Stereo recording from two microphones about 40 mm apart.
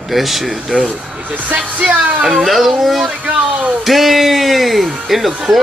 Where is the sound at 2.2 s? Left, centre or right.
Centre.